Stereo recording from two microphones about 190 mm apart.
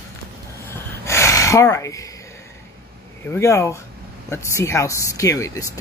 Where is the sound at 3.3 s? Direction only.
15° left (ahead or behind).